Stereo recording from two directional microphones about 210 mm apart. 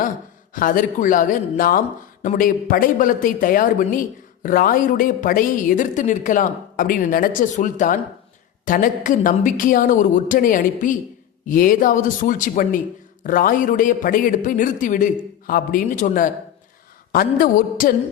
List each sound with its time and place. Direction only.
0.5 s a man's voice: 40° left (ahead or behind)